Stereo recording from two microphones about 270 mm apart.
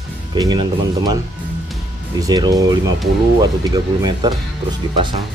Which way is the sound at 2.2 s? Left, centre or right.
Centre.